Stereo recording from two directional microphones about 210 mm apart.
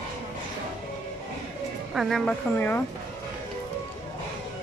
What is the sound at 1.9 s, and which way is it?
Speech, centre (ahead or behind).